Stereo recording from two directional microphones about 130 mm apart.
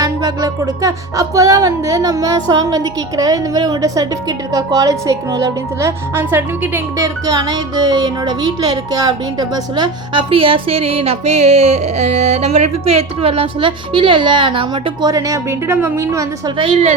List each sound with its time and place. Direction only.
0.0 s music: 30° right (ahead or behind)
15.1 s speech: 25° right (ahead or behind)
16.6 s a woman's voice: 45° right (ahead or behind)